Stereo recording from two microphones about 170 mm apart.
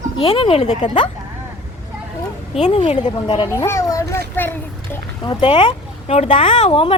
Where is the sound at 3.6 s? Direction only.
15° left (ahead or behind).